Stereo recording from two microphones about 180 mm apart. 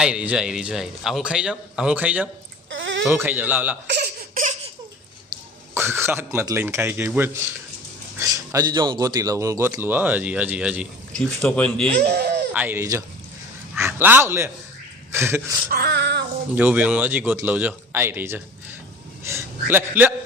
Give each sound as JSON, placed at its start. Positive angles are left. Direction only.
{"t": 0.0, "sound": "a man's voice", "side_deg": -5}
{"t": 2.6, "sound": "a sound", "side_deg": -90}
{"t": 3.1, "sound": "speech", "side_deg": -10}
{"t": 3.9, "sound": "laughter", "side_deg": -65}
{"t": 5.7, "sound": "speech", "side_deg": -15}
{"t": 8.2, "sound": "speech", "side_deg": -20}
{"t": 11.1, "sound": "a man's voice", "side_deg": 5}
{"t": 12.0, "sound": "a sound", "side_deg": -65}
{"t": 12.5, "sound": "a man's voice", "side_deg": -10}
{"t": 15.7, "sound": "a sound", "side_deg": -65}
{"t": 16.6, "sound": "a man's voice", "side_deg": -10}